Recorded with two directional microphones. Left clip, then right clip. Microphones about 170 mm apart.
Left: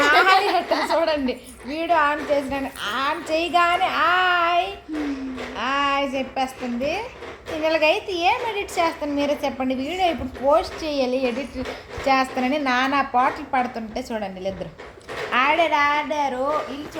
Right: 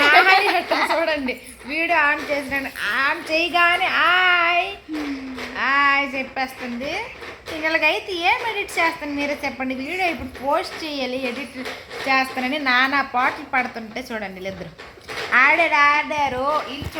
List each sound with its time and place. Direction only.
0.0 s a sound: 25° right (ahead or behind)
1.7 s a woman's voice: 25° right (ahead or behind)
2.0 s a woman's voice: 5° left (ahead or behind)
15.3 s a woman's voice: 10° right (ahead or behind)